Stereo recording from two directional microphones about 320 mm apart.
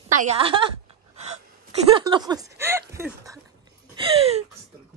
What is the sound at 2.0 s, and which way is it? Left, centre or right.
A woman's voice, centre.